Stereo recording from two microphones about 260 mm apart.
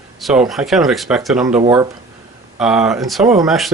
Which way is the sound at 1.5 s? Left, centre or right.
Right.